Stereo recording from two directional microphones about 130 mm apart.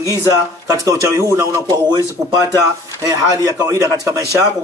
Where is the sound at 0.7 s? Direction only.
25° right (ahead or behind).